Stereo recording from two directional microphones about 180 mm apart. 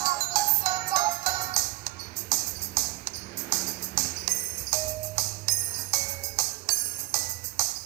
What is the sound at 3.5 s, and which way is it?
Music, 20° right (ahead or behind).